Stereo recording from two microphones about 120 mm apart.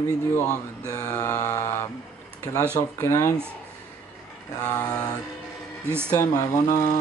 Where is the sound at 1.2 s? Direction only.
25° left (ahead or behind).